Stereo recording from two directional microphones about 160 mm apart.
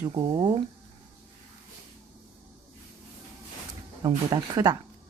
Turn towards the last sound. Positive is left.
turn(degrees=-25)  # may be behind; listen again after turning